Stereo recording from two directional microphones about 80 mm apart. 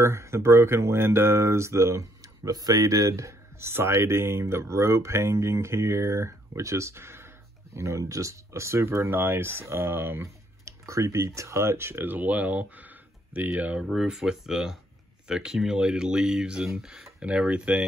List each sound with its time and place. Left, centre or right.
0.0 s speech: right; by 13.8 s centre
13.8 s speech: centre